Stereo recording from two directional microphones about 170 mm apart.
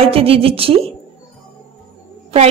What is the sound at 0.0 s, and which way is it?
Speech, 35° right (ahead or behind).